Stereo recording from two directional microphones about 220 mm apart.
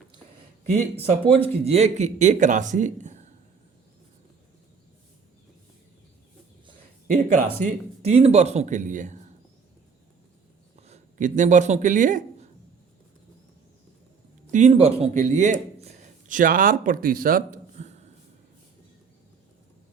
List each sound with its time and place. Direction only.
0.6 s speech: 25° right (ahead or behind)
7.3 s speech: 30° right (ahead or behind)
10.8 s speech: 30° right (ahead or behind)
14.4 s speech: 35° right (ahead or behind)